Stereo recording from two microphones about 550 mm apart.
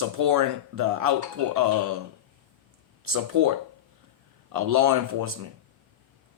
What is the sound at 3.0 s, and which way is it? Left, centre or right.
Speech, right.